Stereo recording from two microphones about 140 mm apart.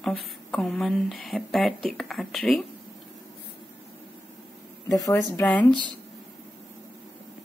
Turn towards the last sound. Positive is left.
turn(degrees=10)  # may be behind; listen again after turning